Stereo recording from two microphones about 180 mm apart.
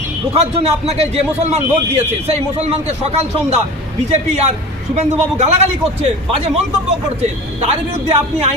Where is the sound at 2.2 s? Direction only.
35° right (ahead or behind).